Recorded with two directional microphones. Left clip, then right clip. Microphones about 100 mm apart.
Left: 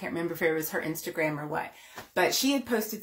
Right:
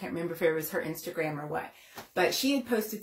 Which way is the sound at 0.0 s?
30° left (ahead or behind).